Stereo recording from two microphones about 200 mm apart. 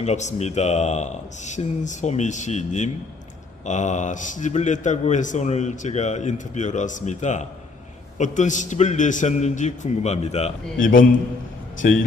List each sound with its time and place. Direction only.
0.0 s a man's voice: 35° left (ahead or behind)